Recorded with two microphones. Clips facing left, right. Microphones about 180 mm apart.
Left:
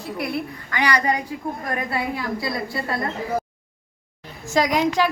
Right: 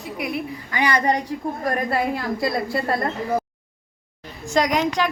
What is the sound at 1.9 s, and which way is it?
Speech, 50° right (ahead or behind).